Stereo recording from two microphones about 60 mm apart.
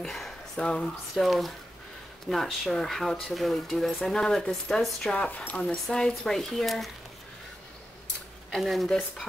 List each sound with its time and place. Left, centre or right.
0.0 s a sound: centre
0.6 s speech: centre
1.2 s speech: centre; by 5.8 s left
5.9 s speech: centre
8.5 s speech: centre